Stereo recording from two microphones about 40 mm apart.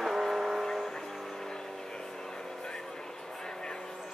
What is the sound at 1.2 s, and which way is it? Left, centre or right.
Train, centre.